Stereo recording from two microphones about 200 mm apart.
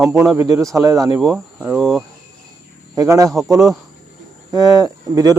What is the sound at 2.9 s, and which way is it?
Speech, 15° right (ahead or behind).